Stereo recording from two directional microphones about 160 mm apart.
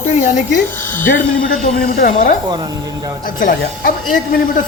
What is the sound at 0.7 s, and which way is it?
Speech, 10° left (ahead or behind).